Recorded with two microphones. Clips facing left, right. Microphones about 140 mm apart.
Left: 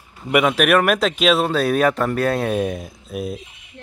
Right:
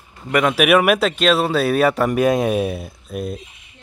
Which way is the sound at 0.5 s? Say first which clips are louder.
Right 2 dB; 5° right (ahead or behind).